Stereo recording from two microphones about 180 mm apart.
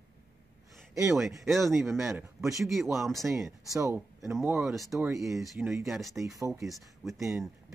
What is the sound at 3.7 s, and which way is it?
Speech, 20° right (ahead or behind).